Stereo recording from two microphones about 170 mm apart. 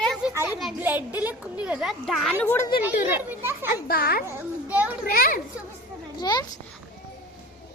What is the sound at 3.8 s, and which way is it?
Speech, 65° left (ahead or behind).